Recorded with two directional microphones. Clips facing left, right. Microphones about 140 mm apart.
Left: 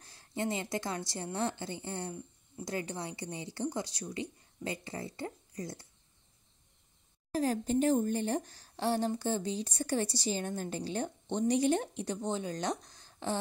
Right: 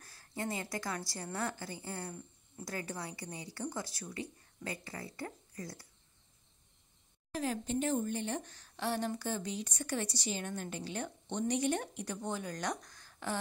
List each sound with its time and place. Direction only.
0.0 s a woman's voice: 25° left (ahead or behind)
7.3 s a woman's voice: 40° left (ahead or behind)